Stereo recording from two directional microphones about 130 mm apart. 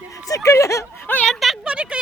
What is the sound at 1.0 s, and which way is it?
Speech, 15° left (ahead or behind).